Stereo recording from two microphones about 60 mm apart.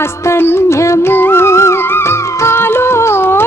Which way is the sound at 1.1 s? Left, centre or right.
Left.